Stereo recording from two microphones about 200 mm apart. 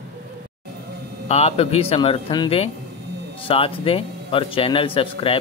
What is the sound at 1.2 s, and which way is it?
Speech, 30° left (ahead or behind).